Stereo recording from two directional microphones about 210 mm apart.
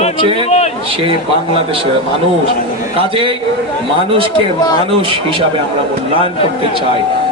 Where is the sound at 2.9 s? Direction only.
25° right (ahead or behind).